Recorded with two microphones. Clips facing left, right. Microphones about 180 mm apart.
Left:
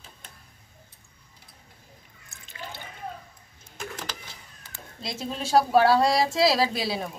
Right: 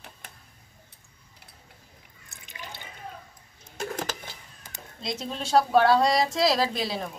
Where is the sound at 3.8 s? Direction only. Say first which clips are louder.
Right 5 dB; 45° right (ahead or behind).